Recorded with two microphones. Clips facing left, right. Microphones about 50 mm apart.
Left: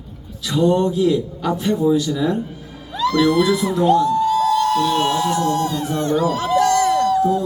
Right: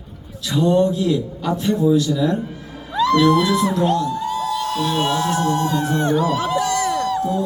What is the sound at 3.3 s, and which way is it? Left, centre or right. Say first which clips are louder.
Speech: left 1 dB; centre.